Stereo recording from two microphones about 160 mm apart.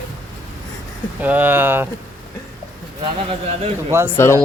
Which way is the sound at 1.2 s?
10° right (ahead or behind).